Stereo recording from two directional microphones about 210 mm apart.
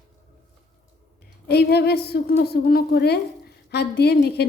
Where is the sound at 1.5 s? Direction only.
50° left (ahead or behind).